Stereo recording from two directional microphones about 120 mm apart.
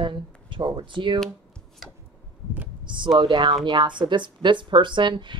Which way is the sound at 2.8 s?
40° right (ahead or behind).